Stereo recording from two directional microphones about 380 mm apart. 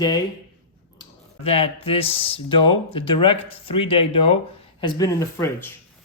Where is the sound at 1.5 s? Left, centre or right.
Centre.